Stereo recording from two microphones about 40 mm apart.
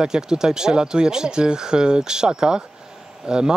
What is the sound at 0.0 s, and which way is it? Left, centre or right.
Speech, centre.